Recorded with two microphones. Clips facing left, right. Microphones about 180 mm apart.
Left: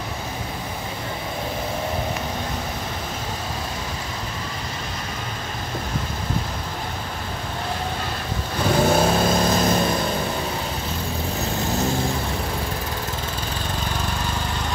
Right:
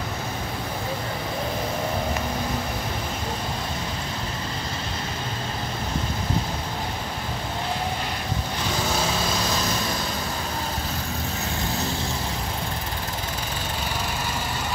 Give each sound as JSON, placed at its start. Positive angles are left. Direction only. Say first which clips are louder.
{"t": 8.7, "sound": "vehicle", "louder": "left 9 dB", "side_deg": 55}